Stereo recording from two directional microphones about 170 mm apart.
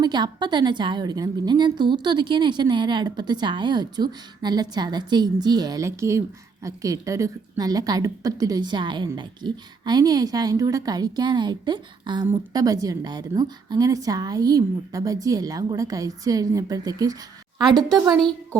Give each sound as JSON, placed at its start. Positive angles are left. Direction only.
{"t": 0.0, "sound": "a woman's voice", "side_deg": -25}